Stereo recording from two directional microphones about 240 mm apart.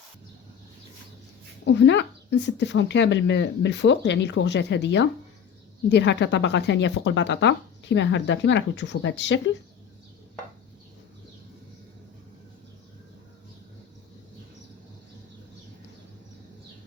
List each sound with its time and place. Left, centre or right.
1.6 s a woman's voice: left